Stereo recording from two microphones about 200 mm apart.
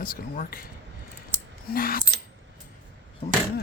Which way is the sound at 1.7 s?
45° left (ahead or behind).